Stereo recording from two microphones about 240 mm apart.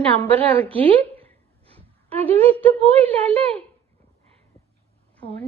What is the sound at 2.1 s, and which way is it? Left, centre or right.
Speech, right.